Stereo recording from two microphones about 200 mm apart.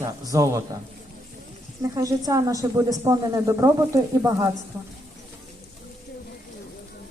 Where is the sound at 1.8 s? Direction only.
15° right (ahead or behind).